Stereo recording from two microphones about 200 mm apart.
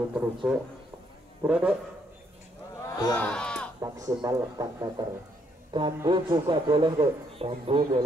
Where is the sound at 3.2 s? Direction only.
5° left (ahead or behind).